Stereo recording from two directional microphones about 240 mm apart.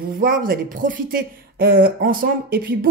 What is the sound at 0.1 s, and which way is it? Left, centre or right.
Speech, right.